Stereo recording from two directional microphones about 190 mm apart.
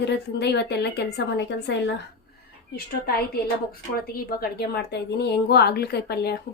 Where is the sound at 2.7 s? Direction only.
55° left (ahead or behind).